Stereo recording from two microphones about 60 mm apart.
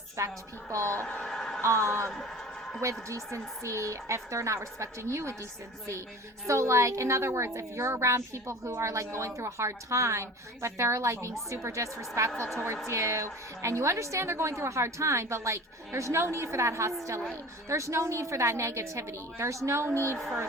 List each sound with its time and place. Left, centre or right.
0.2 s a woman's voice: right
1.0 s a sound: centre
1.6 s a woman's voice: right
2.0 s speech: centre
2.8 s a woman's voice: right
6.5 s a woman's voice: right
20.1 s speech: centre